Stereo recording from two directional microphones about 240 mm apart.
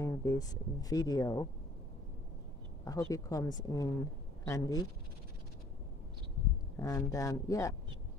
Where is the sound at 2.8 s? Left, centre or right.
Centre.